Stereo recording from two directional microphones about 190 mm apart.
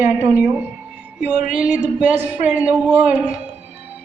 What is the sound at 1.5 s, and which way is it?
Speech, 5° right (ahead or behind).